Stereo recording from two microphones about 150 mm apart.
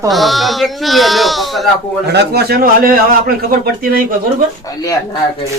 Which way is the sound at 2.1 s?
90° right.